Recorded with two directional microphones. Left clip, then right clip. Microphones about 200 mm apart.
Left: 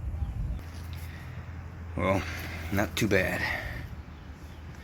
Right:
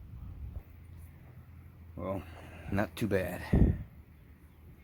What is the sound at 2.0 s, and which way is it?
Speech, 10° right (ahead or behind).